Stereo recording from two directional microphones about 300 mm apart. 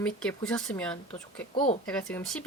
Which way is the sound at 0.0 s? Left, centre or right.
Centre.